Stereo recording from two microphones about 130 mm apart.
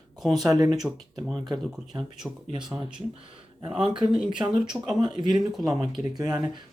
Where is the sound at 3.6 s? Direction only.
50° right (ahead or behind).